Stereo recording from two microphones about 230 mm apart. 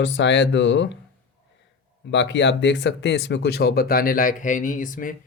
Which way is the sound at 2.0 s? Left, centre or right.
Left.